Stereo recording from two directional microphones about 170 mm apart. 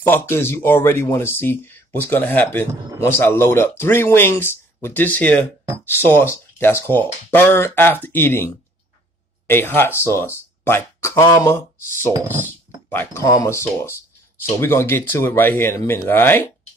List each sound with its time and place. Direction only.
0.0 s speech: 15° left (ahead or behind)
9.5 s speech: 15° left (ahead or behind)
12.1 s speech: 15° right (ahead or behind)
12.4 s speech: 10° left (ahead or behind)